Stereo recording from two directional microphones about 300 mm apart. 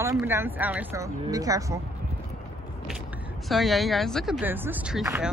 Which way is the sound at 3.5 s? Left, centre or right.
Centre.